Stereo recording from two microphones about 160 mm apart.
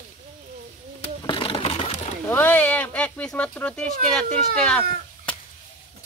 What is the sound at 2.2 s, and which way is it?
Speech, 10° left (ahead or behind).